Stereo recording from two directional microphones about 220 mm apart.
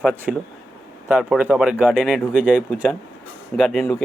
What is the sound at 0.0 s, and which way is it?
Speech, 5° right (ahead or behind).